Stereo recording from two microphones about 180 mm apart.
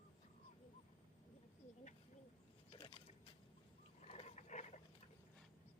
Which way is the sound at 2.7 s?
30° left (ahead or behind).